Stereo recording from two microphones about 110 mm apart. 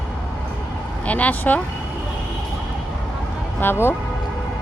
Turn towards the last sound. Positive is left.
turn(degrees=20)  # may be behind; listen again after turning